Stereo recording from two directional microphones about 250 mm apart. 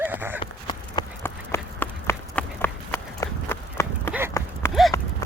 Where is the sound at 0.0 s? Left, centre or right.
Centre.